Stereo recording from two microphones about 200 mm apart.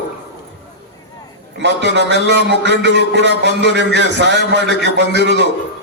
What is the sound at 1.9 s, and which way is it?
A man's voice, 60° right (ahead or behind).